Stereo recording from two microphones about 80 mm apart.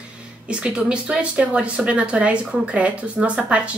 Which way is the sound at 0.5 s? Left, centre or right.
Centre.